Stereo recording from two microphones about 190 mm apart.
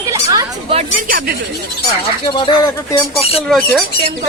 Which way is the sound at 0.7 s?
45° right (ahead or behind).